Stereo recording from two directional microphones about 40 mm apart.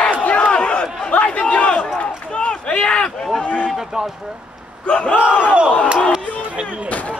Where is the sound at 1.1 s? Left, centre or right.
Left.